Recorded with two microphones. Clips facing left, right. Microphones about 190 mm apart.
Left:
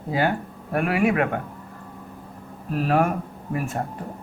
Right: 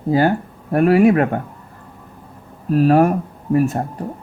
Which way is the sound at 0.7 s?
40° right (ahead or behind).